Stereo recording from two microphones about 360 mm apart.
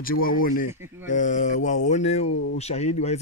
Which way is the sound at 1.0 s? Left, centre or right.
Left.